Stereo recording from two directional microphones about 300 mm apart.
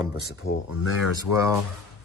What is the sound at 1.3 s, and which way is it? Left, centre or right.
Speech, left.